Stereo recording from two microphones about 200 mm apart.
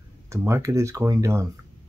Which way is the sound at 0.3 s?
15° right (ahead or behind).